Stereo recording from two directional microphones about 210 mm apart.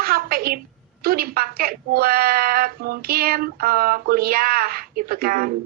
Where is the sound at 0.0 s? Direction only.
45° right (ahead or behind).